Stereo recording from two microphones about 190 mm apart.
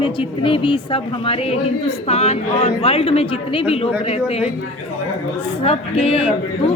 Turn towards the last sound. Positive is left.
turn(degrees=30)  # may be behind; listen again after turning